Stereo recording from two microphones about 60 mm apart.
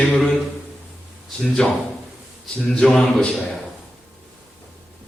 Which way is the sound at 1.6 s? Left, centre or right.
Centre.